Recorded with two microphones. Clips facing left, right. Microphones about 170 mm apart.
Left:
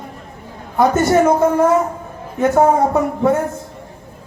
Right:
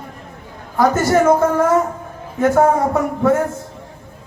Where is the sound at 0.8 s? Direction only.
20° left (ahead or behind).